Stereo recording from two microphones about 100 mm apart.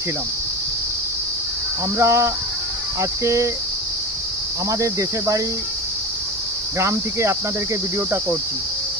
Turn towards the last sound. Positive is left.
turn(degrees=-30)  # may be behind; listen again after turning